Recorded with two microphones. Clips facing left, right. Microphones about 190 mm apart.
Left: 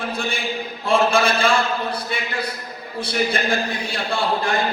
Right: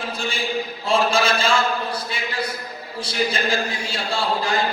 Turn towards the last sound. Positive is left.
turn(degrees=55)  # may be behind; listen again after turning